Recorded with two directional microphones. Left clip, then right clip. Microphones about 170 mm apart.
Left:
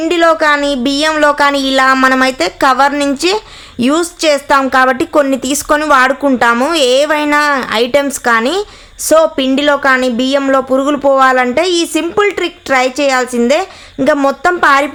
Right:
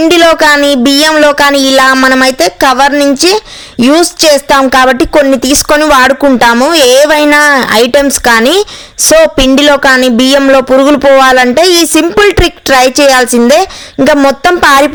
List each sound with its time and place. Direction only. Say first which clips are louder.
0.1 s speech: right 3 dB; 45° right (ahead or behind)